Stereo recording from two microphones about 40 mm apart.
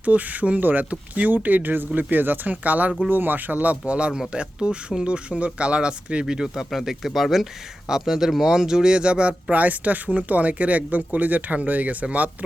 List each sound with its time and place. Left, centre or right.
0.0 s speech: right
3.1 s speech: right
6.2 s speech: centre
9.5 s speech: right